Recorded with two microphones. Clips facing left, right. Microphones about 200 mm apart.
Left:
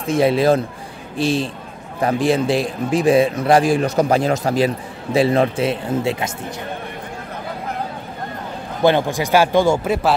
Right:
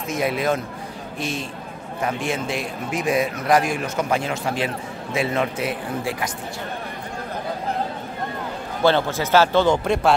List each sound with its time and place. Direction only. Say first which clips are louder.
0.1 s a man's voice: left 8 dB; 30° left (ahead or behind)
8.8 s speech: left 3 dB; 15° left (ahead or behind)